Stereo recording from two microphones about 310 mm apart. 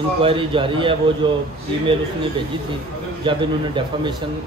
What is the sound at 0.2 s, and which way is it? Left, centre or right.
A man's voice, centre.